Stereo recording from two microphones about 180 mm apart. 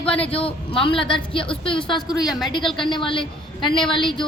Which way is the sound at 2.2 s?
Centre (ahead or behind).